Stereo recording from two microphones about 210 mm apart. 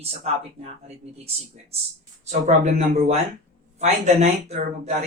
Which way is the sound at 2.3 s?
35° right (ahead or behind).